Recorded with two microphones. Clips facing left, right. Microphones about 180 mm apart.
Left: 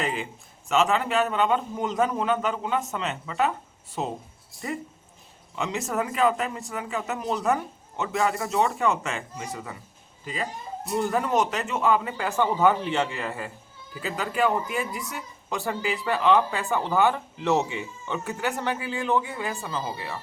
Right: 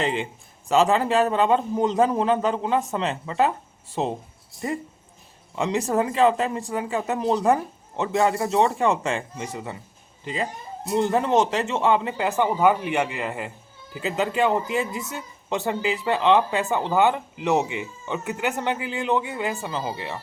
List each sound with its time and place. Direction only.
0.0 s a man's voice: 25° right (ahead or behind)
5.5 s speech: 30° right (ahead or behind)